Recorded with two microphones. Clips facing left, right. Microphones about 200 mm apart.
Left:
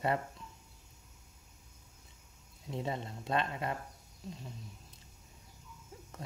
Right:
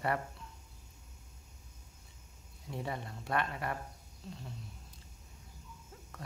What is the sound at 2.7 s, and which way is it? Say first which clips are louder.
Speech: left 2 dB; 20° left (ahead or behind).